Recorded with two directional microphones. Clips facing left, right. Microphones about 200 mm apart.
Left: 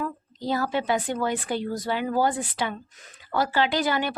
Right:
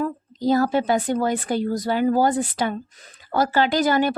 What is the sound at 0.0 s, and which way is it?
Speech, 40° right (ahead or behind).